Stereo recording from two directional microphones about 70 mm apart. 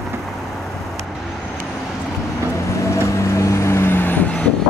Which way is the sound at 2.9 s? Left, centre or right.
Left.